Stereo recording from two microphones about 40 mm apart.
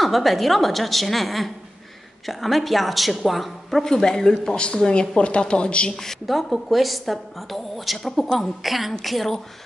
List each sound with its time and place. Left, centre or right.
0.0 s a woman's voice: centre; by 5.9 s left
6.2 s a woman's voice: centre